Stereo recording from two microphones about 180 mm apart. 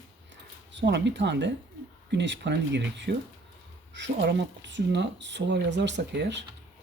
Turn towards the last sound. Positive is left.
turn(degrees=-75)  # may be behind; listen again after turning